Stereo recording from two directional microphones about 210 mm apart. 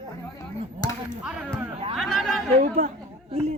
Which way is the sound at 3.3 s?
30° right (ahead or behind).